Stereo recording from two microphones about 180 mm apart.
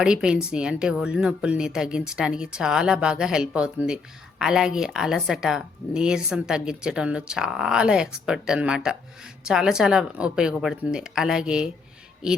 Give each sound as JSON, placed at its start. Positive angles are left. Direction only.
{"t": 0.0, "sound": "speech", "side_deg": -5}